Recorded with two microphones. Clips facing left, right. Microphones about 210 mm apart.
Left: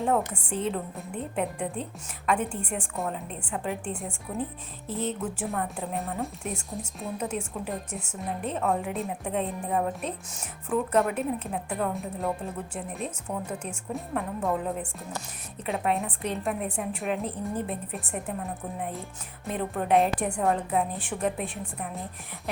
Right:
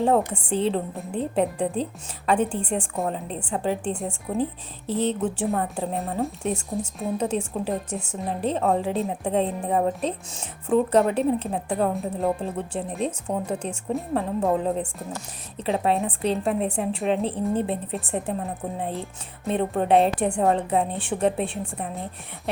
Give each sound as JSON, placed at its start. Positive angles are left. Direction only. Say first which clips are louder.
{"t": 0.0, "sound": "a woman's voice", "louder": "right 5 dB", "side_deg": -30}
{"t": 7.2, "sound": "a woman's voice", "louder": "right 6 dB", "side_deg": -30}